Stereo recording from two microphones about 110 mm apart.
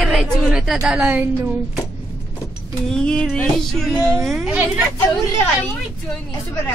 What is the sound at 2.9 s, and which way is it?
Speech, 10° left (ahead or behind).